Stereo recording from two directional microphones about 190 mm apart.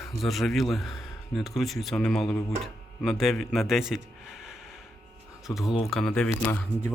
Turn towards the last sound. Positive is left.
turn(degrees=5)  # may be behind; listen again after turning